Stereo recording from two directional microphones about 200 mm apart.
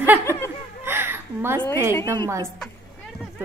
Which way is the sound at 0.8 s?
10° right (ahead or behind).